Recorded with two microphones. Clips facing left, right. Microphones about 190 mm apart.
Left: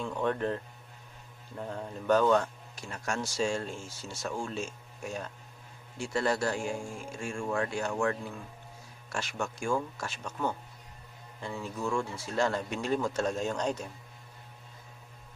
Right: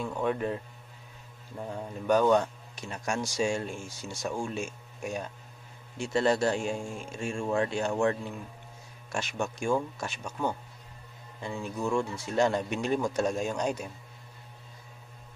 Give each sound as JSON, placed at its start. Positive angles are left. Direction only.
{"t": 0.0, "sound": "a man's voice", "side_deg": -10}